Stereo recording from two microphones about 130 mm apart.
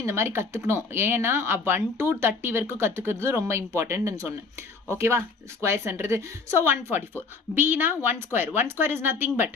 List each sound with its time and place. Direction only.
0.0 s a woman's voice: 20° right (ahead or behind)